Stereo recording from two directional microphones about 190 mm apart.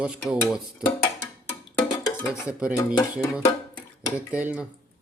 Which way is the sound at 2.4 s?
5° right (ahead or behind).